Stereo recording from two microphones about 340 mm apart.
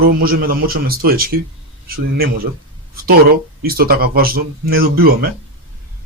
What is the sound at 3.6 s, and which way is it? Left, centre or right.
Speech, right.